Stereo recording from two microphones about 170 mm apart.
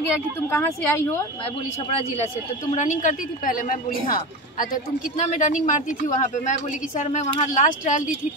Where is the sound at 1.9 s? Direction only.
40° left (ahead or behind).